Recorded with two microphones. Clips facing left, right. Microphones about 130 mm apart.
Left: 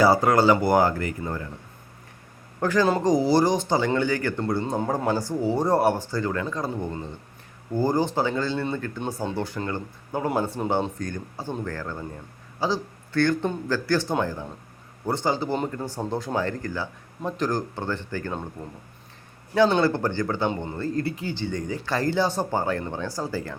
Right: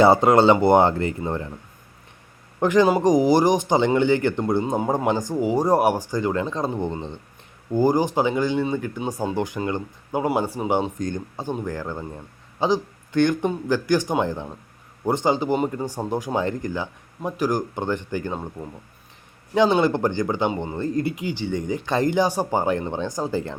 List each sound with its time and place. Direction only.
0.0 s speech: 25° right (ahead or behind)
2.6 s speech: 20° right (ahead or behind)
19.5 s speech: 15° right (ahead or behind)